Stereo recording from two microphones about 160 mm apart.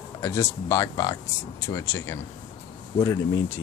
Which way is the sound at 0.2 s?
15° left (ahead or behind).